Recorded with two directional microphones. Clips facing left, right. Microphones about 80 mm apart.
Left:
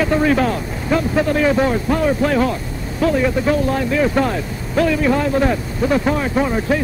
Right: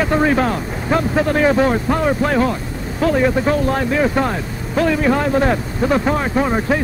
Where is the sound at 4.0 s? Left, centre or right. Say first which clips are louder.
Even; right.